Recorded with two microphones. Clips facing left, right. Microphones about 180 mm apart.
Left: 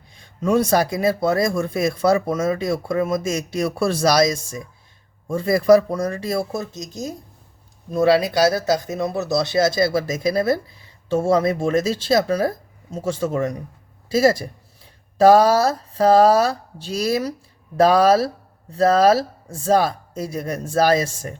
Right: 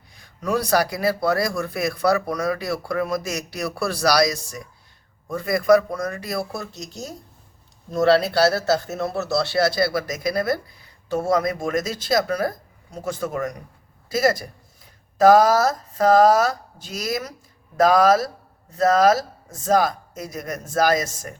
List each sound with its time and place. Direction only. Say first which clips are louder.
0.2 s speech: left 5 dB; 25° left (ahead or behind)
7.9 s speech: left 1 dB; 10° left (ahead or behind); by 21.3 s 30° left (ahead or behind)